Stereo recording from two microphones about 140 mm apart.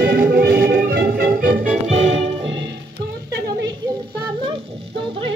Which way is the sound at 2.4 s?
35° right (ahead or behind).